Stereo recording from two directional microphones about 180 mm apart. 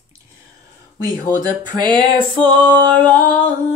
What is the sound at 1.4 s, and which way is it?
Speech, 25° right (ahead or behind).